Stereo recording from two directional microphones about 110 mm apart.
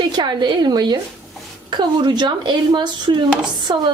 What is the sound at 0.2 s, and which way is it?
A woman's voice, 45° right (ahead or behind).